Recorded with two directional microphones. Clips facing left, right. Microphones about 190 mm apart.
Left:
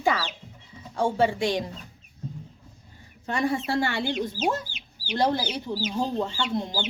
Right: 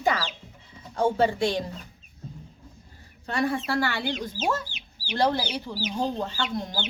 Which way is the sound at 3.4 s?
25° left (ahead or behind).